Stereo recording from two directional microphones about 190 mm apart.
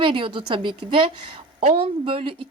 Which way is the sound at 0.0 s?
25° right (ahead or behind).